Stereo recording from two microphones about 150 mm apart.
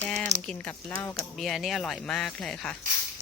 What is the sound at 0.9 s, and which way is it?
Speech, 20° left (ahead or behind).